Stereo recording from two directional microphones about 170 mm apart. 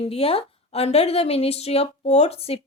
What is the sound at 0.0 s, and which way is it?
A woman's voice, 35° left (ahead or behind).